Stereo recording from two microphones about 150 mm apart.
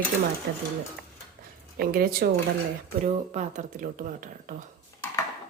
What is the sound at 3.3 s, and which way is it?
Speech, 50° right (ahead or behind).